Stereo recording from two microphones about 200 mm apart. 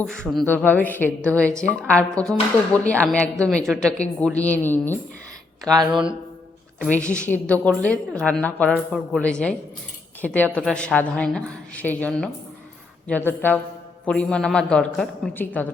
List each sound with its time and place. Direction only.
0.0 s a woman's voice: 5° left (ahead or behind)
5.6 s speech: 20° right (ahead or behind)
5.9 s a woman's voice: 5° right (ahead or behind)
6.9 s a woman's voice: 5° left (ahead or behind)